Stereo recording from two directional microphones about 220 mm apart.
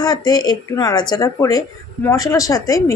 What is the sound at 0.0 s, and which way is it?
A woman's voice, 20° left (ahead or behind).